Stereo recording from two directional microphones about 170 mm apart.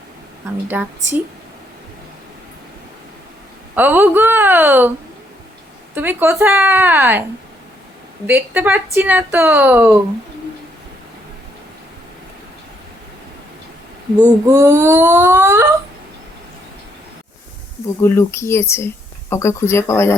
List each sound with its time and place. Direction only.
0.7 s speech: 10° right (ahead or behind)
3.8 s speech: 10° right (ahead or behind)
5.9 s speech: 10° right (ahead or behind)
8.3 s speech: 10° right (ahead or behind)
14.2 s speech: 20° right (ahead or behind)
17.8 s speech: 15° left (ahead or behind)